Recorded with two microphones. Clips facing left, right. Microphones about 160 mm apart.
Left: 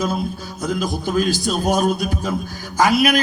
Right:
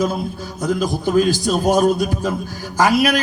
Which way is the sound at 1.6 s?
40° right (ahead or behind).